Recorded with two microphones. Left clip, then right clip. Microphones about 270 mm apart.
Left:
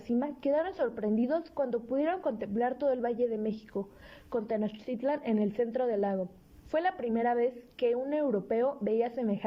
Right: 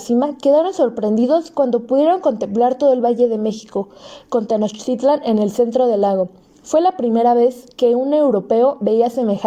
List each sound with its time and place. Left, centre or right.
0.2 s a woman's voice: centre